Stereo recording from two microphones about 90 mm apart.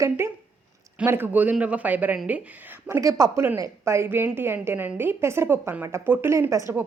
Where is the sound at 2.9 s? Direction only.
35° right (ahead or behind).